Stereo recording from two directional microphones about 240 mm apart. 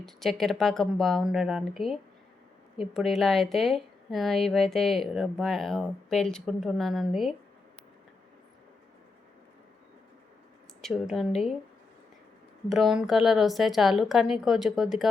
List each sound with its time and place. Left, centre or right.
0.0 s a woman's voice: centre
10.8 s a woman's voice: centre
12.6 s a woman's voice: centre